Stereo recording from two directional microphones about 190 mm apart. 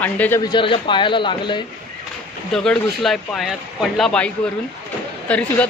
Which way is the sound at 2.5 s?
5° left (ahead or behind).